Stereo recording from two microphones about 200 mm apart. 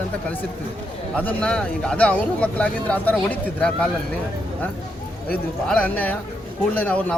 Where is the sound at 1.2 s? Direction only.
5° left (ahead or behind).